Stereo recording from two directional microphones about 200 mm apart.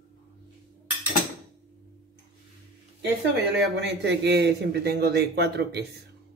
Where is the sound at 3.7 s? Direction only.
55° right (ahead or behind).